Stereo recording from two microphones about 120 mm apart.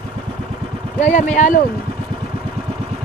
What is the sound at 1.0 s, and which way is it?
Speech, 85° left.